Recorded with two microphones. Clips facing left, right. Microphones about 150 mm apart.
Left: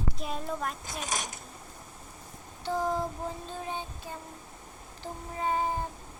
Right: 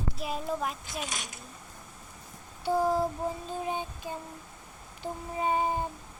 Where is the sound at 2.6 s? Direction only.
10° right (ahead or behind).